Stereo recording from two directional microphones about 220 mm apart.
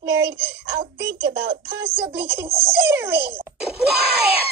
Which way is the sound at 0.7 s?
60° right (ahead or behind).